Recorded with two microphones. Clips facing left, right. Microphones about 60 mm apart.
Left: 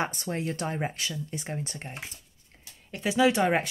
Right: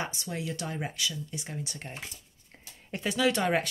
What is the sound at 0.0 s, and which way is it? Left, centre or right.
Speech, left.